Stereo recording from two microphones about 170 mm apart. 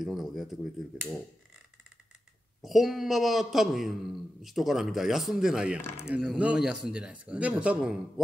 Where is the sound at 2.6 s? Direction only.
Centre (ahead or behind).